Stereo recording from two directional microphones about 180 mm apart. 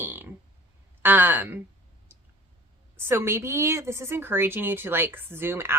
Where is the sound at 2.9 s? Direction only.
15° right (ahead or behind).